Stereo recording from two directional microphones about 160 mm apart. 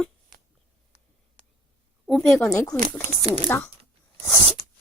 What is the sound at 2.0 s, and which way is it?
Speech, centre (ahead or behind).